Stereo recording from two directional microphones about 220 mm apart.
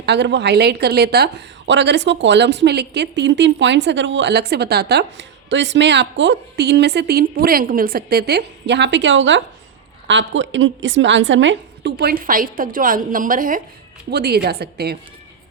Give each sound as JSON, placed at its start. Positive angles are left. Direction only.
{"t": 0.0, "sound": "a woman's voice", "side_deg": -50}